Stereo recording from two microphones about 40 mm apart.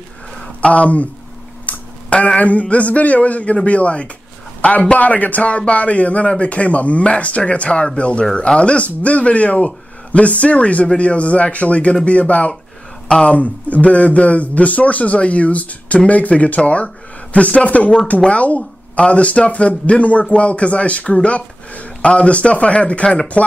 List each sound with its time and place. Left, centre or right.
0.6 s a man's voice: left